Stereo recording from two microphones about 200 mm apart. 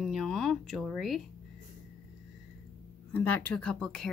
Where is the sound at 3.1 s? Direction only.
10° left (ahead or behind).